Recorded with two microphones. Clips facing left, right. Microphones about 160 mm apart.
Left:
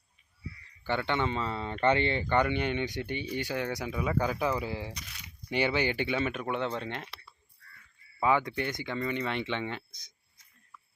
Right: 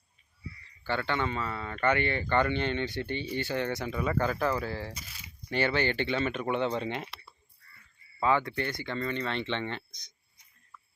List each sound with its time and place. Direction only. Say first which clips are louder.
0.9 s speech: left 1 dB; 20° left (ahead or behind)
4.9 s speech: even; 5° right (ahead or behind)
5.5 s speech: even; 15° left (ahead or behind); by 7.3 s 5° right (ahead or behind)
8.2 s speech: even; 15° left (ahead or behind)